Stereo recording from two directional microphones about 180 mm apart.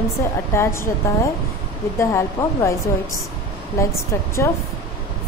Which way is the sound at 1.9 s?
15° left (ahead or behind).